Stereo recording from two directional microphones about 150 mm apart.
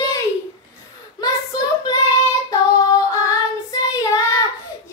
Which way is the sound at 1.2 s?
25° left (ahead or behind).